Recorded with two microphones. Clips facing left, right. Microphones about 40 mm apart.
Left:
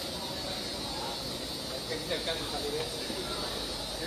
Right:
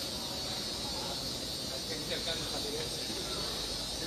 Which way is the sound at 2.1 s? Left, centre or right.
Centre.